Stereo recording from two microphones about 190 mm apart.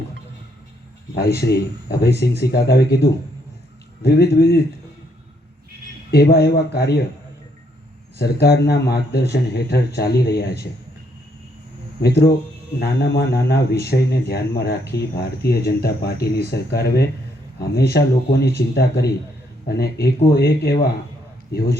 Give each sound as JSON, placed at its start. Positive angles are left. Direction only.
{"t": 1.4, "sound": "speech", "side_deg": 55}
{"t": 4.0, "sound": "speech", "side_deg": 55}
{"t": 6.1, "sound": "speech", "side_deg": 55}
{"t": 8.2, "sound": "speech", "side_deg": 60}
{"t": 12.0, "sound": "speech", "side_deg": 60}